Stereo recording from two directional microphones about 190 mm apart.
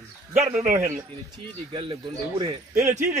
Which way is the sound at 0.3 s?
40° right (ahead or behind).